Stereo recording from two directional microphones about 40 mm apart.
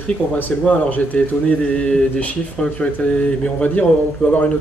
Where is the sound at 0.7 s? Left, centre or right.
Left.